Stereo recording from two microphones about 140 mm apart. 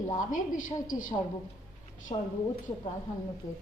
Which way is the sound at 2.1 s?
40° left (ahead or behind).